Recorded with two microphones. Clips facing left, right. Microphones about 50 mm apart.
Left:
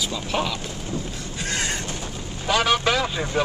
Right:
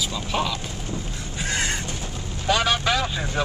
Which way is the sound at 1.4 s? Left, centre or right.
Centre.